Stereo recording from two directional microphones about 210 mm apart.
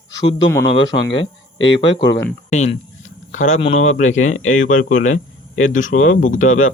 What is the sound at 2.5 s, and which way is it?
Speech, 35° left (ahead or behind).